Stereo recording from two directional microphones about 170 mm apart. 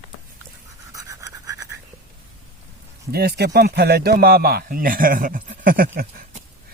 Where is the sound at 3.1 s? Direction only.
65° right (ahead or behind).